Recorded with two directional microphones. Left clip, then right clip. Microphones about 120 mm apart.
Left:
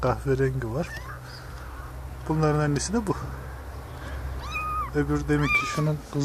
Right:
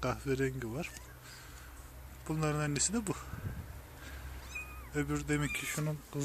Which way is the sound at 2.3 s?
15° right (ahead or behind).